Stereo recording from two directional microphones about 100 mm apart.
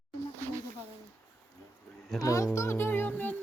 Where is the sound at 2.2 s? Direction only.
35° left (ahead or behind); by 3.4 s 20° left (ahead or behind).